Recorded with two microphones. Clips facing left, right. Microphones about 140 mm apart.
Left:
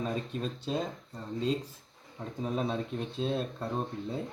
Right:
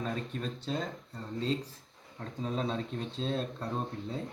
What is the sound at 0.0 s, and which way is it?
Speech, 10° left (ahead or behind).